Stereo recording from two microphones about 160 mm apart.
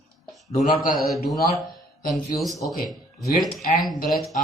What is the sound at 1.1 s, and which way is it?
A man's voice, centre (ahead or behind).